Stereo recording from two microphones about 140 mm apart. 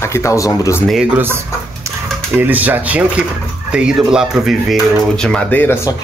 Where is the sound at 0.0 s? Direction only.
20° left (ahead or behind).